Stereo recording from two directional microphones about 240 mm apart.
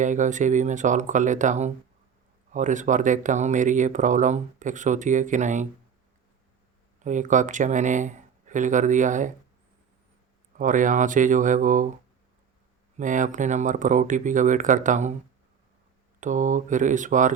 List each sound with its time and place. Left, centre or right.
0.0 s speech: right
7.0 s speech: right
10.6 s speech: right
13.0 s speech: right
16.2 s speech: right